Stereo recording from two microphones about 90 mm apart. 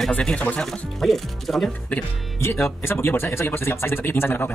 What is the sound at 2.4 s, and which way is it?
A man's voice, 25° left (ahead or behind).